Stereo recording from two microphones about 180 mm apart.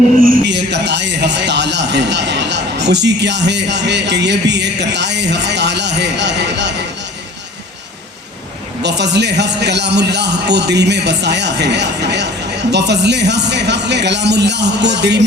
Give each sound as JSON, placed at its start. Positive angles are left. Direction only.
{"t": 0.4, "sound": "a man's voice", "side_deg": -75}
{"t": 8.8, "sound": "a man's voice", "side_deg": -70}